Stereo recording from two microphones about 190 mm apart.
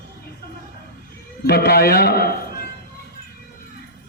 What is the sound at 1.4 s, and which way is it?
Speech, 55° left (ahead or behind).